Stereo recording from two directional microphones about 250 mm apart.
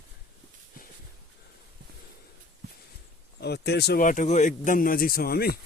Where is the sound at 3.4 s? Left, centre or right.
Left.